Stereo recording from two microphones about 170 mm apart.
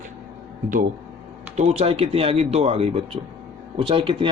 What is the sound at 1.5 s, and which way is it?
Speech, 40° right (ahead or behind).